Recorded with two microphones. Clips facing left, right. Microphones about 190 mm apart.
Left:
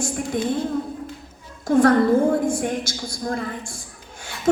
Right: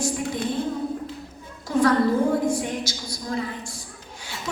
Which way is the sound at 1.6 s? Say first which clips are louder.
Left 4 dB; 50° left (ahead or behind).